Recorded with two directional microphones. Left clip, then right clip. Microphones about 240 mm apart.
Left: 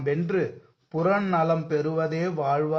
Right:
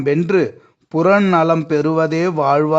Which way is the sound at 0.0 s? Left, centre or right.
Right.